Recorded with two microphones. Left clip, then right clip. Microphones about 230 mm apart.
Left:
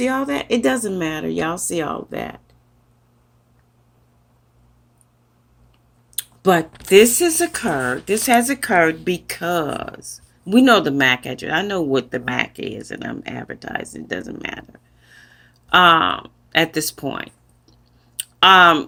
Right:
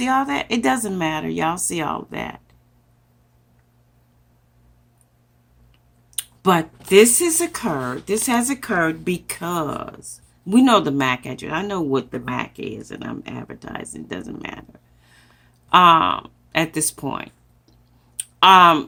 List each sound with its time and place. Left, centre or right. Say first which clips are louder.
0.0 s speech: right 1 dB; centre
6.1 s speech: left 2 dB; centre
15.0 s a sound: left 9 dB; centre
15.7 s speech: even; centre